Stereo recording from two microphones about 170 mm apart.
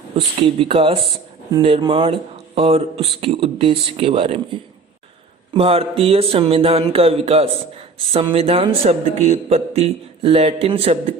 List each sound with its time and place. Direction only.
0.3 s a man's voice: 30° right (ahead or behind)
5.5 s a man's voice: 35° right (ahead or behind)